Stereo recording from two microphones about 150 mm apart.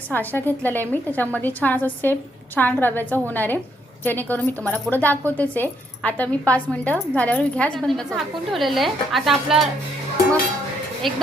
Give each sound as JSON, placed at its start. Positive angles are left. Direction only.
{"t": 0.1, "sound": "a woman's voice", "side_deg": 10}
{"t": 11.0, "sound": "a woman's voice", "side_deg": 0}